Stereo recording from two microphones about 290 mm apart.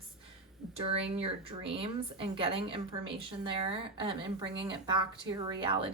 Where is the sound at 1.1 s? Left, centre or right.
Centre.